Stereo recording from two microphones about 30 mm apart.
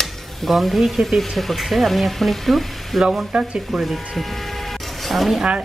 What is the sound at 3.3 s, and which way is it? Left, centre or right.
Speech, right.